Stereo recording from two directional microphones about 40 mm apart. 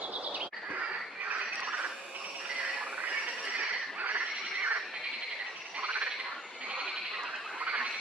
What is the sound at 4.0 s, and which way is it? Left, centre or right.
Neigh, right.